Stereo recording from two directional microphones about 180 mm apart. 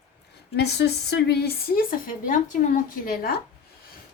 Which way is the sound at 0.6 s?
70° left (ahead or behind).